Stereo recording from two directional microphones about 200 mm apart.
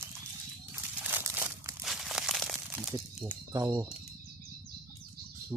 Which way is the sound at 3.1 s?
10° right (ahead or behind).